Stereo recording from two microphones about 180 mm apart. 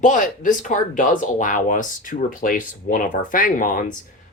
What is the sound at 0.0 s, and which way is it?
Speech, 45° left (ahead or behind).